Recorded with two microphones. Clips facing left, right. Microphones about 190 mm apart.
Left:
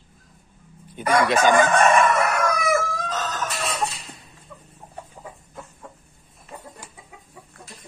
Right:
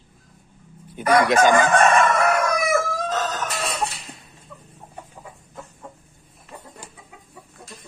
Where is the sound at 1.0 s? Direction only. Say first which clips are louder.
Right 3 dB; 10° right (ahead or behind).